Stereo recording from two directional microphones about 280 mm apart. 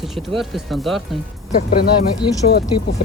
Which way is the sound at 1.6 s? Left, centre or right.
Left.